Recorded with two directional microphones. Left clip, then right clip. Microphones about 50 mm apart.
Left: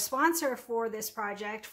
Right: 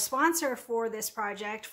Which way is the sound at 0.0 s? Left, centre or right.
Right.